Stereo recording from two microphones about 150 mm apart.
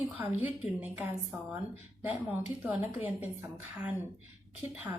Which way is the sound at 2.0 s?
10° right (ahead or behind).